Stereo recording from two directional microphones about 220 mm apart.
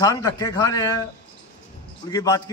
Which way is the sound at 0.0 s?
15° left (ahead or behind).